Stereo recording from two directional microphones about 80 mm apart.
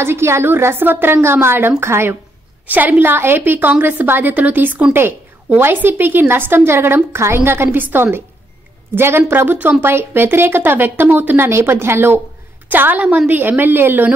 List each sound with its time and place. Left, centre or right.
0.0 s a woman's voice: right